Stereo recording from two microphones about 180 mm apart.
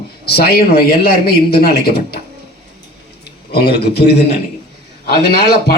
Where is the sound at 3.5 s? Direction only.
60° left (ahead or behind).